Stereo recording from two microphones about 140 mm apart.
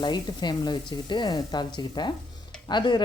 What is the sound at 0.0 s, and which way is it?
Speech, 30° left (ahead or behind).